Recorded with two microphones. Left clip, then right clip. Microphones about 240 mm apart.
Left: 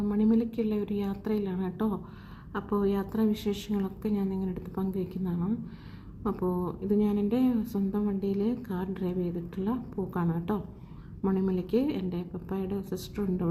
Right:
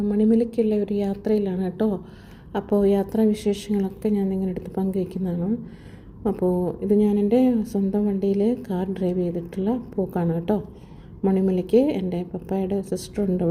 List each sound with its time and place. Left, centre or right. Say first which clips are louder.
0.1 s a woman's voice: right 8 dB; centre
6.9 s a woman's voice: right 9 dB; centre